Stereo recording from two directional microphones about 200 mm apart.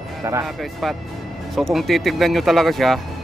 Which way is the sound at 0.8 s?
Centre (ahead or behind).